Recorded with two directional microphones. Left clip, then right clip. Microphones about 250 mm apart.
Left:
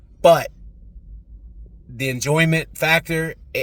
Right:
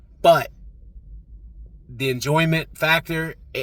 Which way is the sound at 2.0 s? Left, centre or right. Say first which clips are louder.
Left 1 dB; centre.